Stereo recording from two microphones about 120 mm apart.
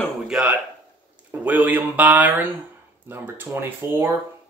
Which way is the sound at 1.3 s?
15° right (ahead or behind).